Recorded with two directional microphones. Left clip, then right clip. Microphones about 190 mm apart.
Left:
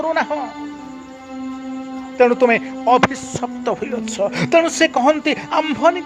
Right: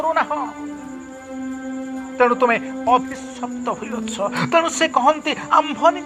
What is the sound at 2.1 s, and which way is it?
A man's voice, 45° left (ahead or behind).